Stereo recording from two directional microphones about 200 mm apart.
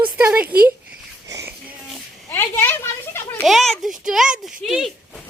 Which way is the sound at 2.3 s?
10° left (ahead or behind).